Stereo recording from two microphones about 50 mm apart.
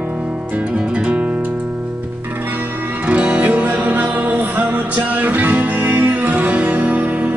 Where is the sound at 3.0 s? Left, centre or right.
Right.